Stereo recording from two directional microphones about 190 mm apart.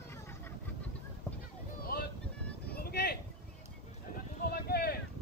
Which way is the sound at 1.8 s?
55° left (ahead or behind).